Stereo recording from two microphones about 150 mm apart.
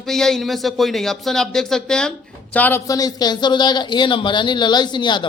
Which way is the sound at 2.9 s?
25° left (ahead or behind).